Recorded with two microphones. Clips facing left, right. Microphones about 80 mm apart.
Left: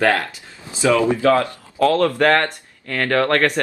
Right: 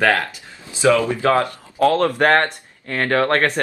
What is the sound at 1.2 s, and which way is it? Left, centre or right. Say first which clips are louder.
Speech: left 1 dB; right.